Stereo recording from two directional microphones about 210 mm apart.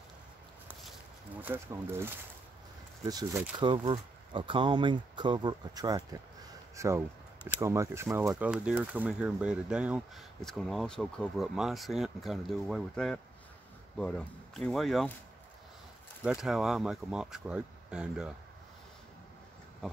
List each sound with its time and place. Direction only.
1.4 s speech: 10° right (ahead or behind)
16.3 s speech: centre (ahead or behind)